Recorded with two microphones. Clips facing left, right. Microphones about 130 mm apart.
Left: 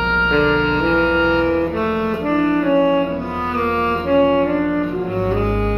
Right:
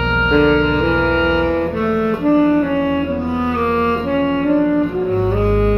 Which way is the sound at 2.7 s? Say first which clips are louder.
Left 3 dB; 10° left (ahead or behind).